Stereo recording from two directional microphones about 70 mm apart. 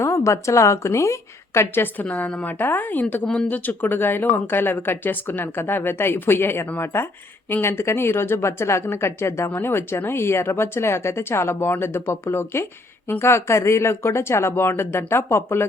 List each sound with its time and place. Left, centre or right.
0.0 s a woman's voice: left
1.7 s speech: left